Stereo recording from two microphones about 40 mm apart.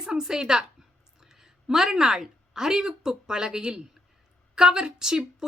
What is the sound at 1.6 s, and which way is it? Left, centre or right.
A woman's voice, centre.